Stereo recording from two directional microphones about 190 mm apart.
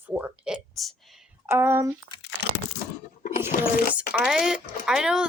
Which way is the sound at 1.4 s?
15° right (ahead or behind).